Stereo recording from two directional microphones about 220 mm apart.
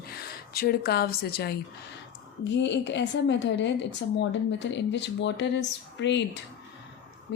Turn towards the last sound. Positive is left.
turn(degrees=55)  # may be behind; listen again after turning